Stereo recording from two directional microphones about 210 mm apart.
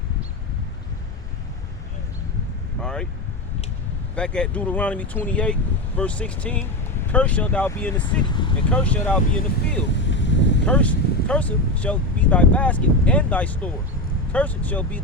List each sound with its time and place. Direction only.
2.8 s vehicle: 5° left (ahead or behind)
4.1 s speech: 5° left (ahead or behind)
10.1 s boat: 60° left (ahead or behind)
10.7 s speech: 5° left (ahead or behind)